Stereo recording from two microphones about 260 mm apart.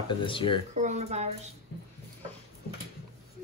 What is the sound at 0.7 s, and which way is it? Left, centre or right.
Speech, right.